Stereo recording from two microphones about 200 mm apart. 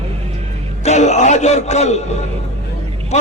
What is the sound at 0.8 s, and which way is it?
A man's voice, 35° left (ahead or behind).